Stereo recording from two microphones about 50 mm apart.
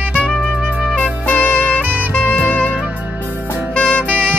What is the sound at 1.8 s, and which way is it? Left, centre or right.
Saxophone, right.